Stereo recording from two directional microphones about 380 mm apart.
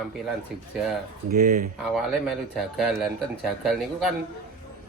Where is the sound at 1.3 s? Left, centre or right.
Right.